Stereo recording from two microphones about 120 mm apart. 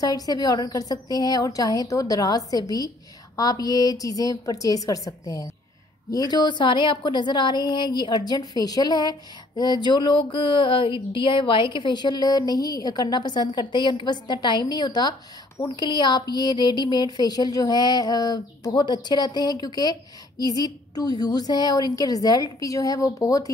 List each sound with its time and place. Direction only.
0.0 s a woman's voice: 30° left (ahead or behind)